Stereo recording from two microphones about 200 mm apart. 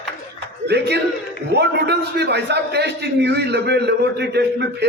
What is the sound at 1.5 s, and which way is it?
A man's voice, 55° right (ahead or behind).